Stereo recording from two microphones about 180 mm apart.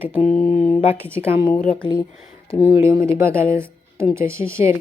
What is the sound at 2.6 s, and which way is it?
Speech, 15° right (ahead or behind).